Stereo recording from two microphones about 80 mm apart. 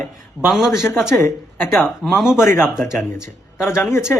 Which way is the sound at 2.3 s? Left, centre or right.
Left.